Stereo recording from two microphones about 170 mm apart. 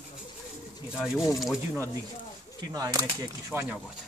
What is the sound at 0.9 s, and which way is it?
Speech, 5° right (ahead or behind).